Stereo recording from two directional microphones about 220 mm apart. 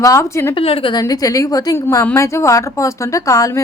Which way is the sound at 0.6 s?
25° left (ahead or behind).